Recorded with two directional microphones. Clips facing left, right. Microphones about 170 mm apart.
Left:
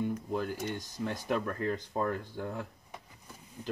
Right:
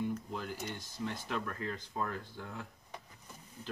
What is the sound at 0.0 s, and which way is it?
Speech, 50° left (ahead or behind).